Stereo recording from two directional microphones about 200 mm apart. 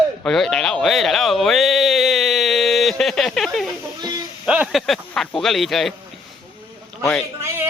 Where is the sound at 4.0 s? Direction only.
20° right (ahead or behind).